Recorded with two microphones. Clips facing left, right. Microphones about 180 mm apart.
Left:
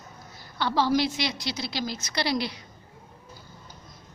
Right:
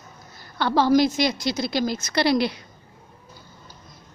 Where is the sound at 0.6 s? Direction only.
50° right (ahead or behind).